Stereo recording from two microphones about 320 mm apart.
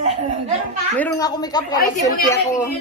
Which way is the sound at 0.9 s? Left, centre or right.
Centre.